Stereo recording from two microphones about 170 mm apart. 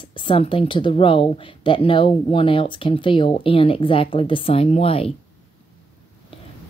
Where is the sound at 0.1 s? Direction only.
30° left (ahead or behind).